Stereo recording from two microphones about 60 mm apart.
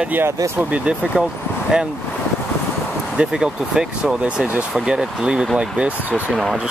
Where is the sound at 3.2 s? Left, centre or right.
Centre.